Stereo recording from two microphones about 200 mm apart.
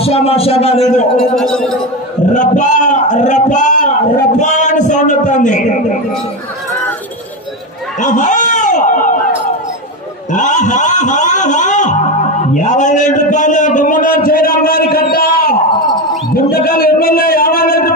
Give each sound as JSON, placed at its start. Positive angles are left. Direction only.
{"t": 0.0, "sound": "a man's voice", "side_deg": 30}
{"t": 1.3, "sound": "speech", "side_deg": 5}
{"t": 2.3, "sound": "a man's voice", "side_deg": 40}
{"t": 8.0, "sound": "a sound", "side_deg": 40}
{"t": 10.3, "sound": "a man's voice", "side_deg": 40}